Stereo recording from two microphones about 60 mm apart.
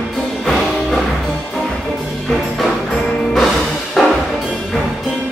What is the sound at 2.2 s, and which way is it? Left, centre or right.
Music, centre.